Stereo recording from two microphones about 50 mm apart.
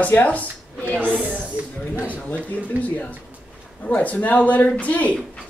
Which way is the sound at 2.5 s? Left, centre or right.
Left.